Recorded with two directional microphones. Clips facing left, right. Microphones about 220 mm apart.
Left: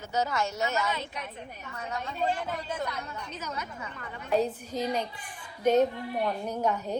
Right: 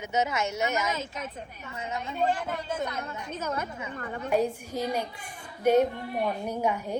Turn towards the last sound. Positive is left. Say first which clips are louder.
# right 1 dB
turn(degrees=-10)  # may be behind; listen again after turning